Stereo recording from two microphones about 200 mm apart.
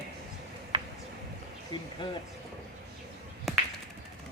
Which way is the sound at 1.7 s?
25° left (ahead or behind).